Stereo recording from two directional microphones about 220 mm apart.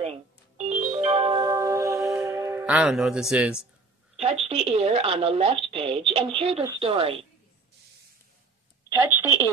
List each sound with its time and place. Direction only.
0.0 s music: 30° right (ahead or behind); by 3.6 s 5° right (ahead or behind)
4.5 s a woman's voice: 30° right (ahead or behind)
8.8 s a sound: 10° right (ahead or behind)